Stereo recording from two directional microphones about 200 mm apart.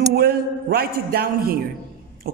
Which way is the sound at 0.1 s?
50° right (ahead or behind).